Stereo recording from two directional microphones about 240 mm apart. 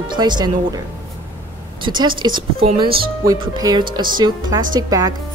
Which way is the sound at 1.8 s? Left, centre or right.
Centre.